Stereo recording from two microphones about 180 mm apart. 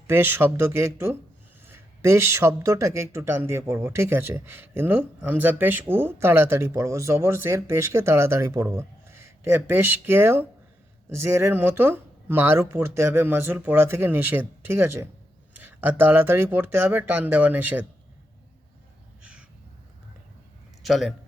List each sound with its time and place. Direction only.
0.1 s speech: 10° right (ahead or behind)
19.2 s crow: 5° right (ahead or behind)
20.8 s a man's voice: centre (ahead or behind)